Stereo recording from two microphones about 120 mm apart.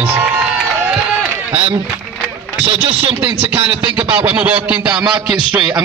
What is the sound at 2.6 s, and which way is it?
Speech, 50° right (ahead or behind).